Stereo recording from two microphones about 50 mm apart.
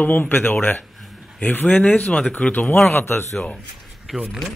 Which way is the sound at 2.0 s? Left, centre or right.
Centre.